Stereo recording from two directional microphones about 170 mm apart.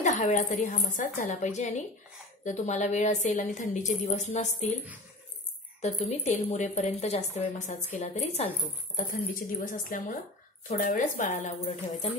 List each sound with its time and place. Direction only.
0.0 s speech: 45° left (ahead or behind)
5.8 s speech: 45° left (ahead or behind)